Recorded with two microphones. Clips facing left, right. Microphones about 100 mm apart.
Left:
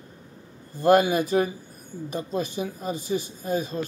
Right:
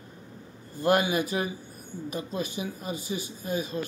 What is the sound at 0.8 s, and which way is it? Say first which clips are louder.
Speech: left 5 dB; 40° left (ahead or behind).